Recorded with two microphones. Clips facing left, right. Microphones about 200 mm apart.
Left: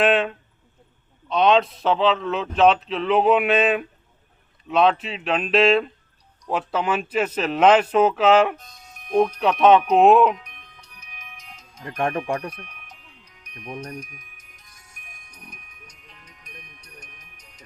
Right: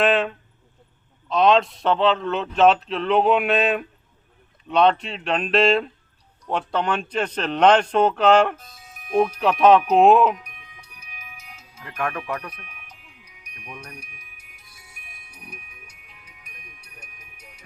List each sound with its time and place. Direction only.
0.0 s a man's voice: centre (ahead or behind)
10.3 s music: 10° right (ahead or behind)
11.9 s speech: 30° left (ahead or behind)
12.5 s music: 5° right (ahead or behind)
13.7 s speech: 35° left (ahead or behind)
13.9 s music: 10° right (ahead or behind)